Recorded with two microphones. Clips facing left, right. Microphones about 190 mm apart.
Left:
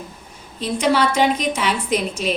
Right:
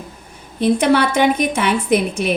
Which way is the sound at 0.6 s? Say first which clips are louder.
Right 4 dB; 60° right (ahead or behind).